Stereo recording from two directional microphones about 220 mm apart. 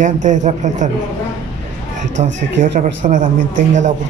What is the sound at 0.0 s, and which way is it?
Speech, 35° right (ahead or behind).